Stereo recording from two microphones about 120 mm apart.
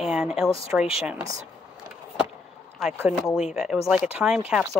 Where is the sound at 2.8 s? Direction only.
Centre (ahead or behind).